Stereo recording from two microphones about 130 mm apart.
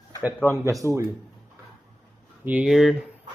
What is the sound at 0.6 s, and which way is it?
Speech, 25° right (ahead or behind).